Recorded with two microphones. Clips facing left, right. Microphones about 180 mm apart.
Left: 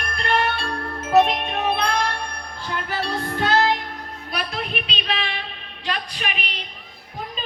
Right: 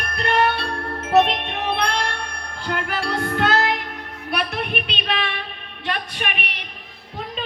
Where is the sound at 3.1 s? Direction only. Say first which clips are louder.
Right 3 dB; 65° right (ahead or behind).